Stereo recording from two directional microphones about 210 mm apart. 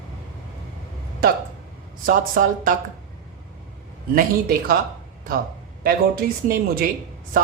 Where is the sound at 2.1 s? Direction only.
40° right (ahead or behind).